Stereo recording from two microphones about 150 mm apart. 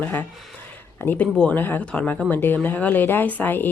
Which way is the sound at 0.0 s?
10° left (ahead or behind).